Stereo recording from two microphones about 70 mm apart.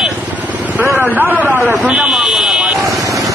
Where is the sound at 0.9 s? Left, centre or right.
Right.